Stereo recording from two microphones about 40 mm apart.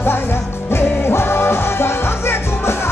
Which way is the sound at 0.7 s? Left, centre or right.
Left.